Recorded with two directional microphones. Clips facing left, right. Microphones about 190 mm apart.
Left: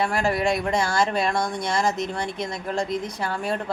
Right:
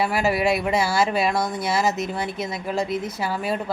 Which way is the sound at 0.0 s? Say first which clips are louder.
Right 2 dB; 5° right (ahead or behind).